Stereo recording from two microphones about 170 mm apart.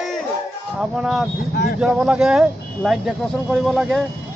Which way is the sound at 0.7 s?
Centre (ahead or behind).